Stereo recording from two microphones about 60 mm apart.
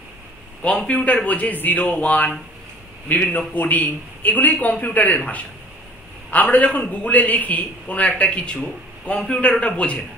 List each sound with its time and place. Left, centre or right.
0.6 s a man's voice: left
3.3 s a man's voice: left
6.3 s a man's voice: left